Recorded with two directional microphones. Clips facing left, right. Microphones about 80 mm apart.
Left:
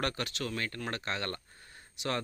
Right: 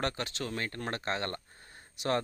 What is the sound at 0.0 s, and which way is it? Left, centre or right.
Speech, right.